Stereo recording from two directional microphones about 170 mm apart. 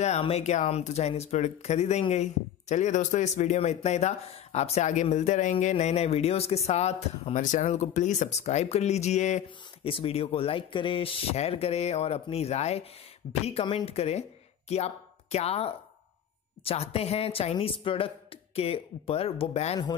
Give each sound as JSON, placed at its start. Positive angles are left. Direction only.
{"t": 0.0, "sound": "speech", "side_deg": 40}